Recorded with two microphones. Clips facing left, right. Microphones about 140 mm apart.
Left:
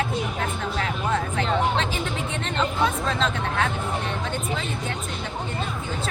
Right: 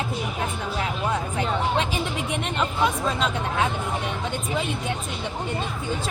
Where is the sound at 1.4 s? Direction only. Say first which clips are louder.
Even; 10° right (ahead or behind).